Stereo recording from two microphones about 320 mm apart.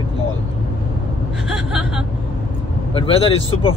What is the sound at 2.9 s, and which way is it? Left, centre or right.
Speech, centre.